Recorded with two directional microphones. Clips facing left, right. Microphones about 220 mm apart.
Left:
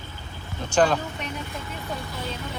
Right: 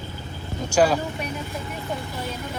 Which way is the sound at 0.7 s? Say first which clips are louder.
Right 1 dB; 10° right (ahead or behind).